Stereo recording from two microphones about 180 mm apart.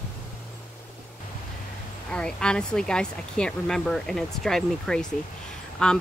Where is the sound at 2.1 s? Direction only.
5° left (ahead or behind).